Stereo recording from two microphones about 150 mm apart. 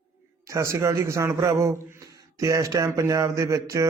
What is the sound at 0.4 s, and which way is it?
Speech, 20° right (ahead or behind).